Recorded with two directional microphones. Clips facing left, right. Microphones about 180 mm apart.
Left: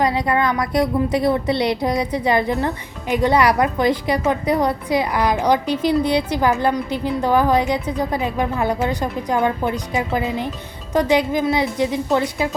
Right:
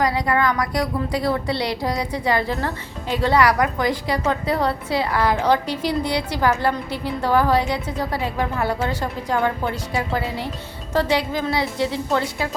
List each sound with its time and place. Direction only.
0.0 s a woman's voice: 20° left (ahead or behind)